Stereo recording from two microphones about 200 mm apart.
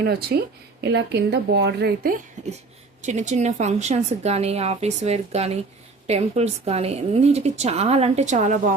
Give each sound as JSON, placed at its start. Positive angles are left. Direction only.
{"t": 0.0, "sound": "a woman's voice", "side_deg": -50}